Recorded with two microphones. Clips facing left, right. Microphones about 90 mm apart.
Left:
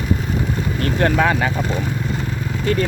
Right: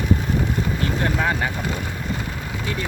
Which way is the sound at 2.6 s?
55° left (ahead or behind).